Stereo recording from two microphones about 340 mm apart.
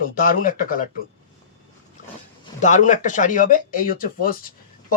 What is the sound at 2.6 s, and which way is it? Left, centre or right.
Speech, left.